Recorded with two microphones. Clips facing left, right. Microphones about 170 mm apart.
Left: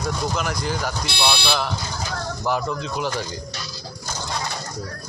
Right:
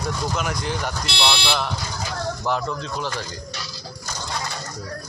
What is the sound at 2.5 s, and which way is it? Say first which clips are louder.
Speech: left 3 dB; 10° left (ahead or behind).